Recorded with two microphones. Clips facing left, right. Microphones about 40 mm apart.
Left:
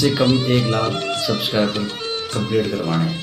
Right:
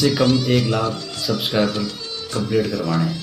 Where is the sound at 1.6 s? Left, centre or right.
Left.